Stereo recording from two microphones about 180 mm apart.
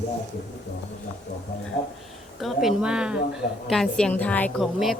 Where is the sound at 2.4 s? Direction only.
Centre (ahead or behind).